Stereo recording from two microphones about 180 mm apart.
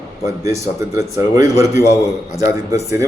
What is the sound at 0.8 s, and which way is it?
Speech, 15° right (ahead or behind).